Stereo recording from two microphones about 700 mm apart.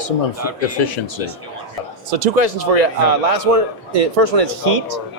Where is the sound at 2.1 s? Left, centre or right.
Right.